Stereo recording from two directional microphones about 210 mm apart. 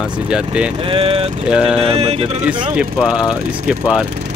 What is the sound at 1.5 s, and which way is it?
Speech, 5° right (ahead or behind).